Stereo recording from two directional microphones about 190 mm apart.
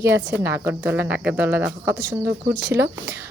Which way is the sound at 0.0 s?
15° right (ahead or behind).